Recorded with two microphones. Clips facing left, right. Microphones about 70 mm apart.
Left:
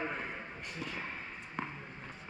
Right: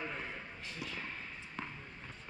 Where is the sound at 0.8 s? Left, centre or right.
Centre.